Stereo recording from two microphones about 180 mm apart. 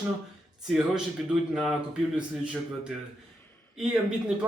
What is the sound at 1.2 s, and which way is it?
A man's voice, 5° right (ahead or behind).